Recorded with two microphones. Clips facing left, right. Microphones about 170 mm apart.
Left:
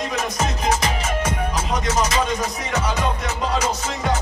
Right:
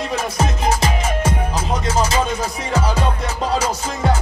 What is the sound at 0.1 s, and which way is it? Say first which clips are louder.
Music: right 2 dB; 30° right (ahead or behind).